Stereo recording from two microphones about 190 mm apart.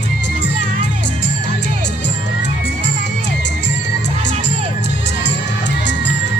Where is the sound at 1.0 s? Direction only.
65° left (ahead or behind).